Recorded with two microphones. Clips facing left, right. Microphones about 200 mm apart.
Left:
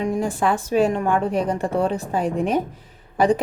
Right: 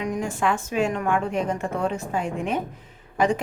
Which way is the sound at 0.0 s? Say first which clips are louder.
Left 4 dB; 30° left (ahead or behind).